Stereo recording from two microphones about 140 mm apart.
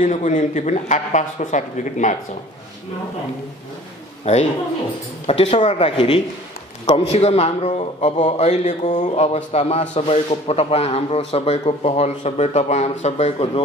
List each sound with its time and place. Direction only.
0.0 s speech: 60° left (ahead or behind)
4.2 s a man's voice: 50° left (ahead or behind)